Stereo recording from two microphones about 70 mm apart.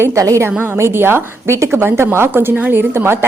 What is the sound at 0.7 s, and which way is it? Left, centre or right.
A woman's voice, right.